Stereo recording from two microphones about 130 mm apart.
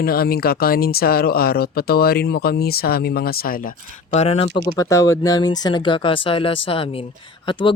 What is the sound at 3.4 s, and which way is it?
Speech, 90° left.